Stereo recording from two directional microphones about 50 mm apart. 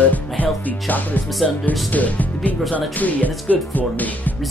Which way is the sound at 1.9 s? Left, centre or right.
Left.